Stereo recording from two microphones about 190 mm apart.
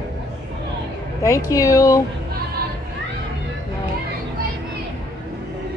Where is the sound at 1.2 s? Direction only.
15° left (ahead or behind).